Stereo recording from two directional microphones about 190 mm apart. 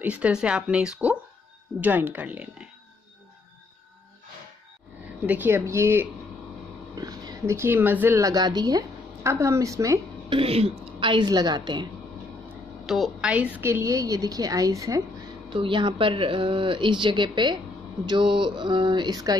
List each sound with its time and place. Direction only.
0.0 s a woman's voice: 5° right (ahead or behind)
5.2 s a woman's voice: 10° right (ahead or behind)
10.4 s speech: 30° right (ahead or behind)
12.8 s a woman's voice: centre (ahead or behind); by 19.3 s 20° right (ahead or behind)